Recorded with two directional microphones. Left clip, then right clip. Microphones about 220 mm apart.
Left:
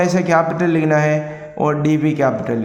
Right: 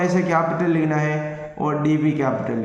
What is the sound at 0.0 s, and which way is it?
A man's voice, 50° left (ahead or behind).